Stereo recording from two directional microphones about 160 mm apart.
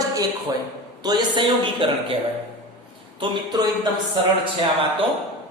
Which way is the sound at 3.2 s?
25° right (ahead or behind).